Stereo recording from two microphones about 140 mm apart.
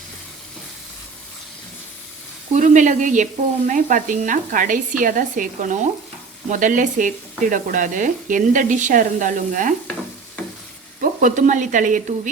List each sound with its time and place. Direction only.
2.5 s speech: 65° right (ahead or behind)
11.0 s speech: 65° right (ahead or behind)